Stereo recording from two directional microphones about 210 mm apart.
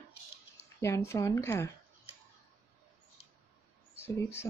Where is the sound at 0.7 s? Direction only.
15° left (ahead or behind).